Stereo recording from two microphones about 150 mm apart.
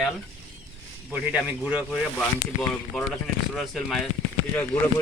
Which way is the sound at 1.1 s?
10° right (ahead or behind).